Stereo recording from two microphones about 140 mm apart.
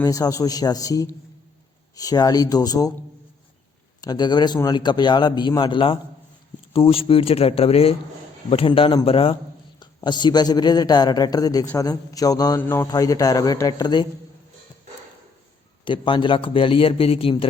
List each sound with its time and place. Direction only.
0.0 s a man's voice: 25° left (ahead or behind)
4.0 s a man's voice: 30° left (ahead or behind)
15.8 s a man's voice: 35° left (ahead or behind)